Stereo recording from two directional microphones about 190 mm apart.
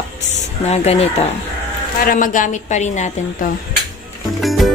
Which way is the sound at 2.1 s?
45° left (ahead or behind).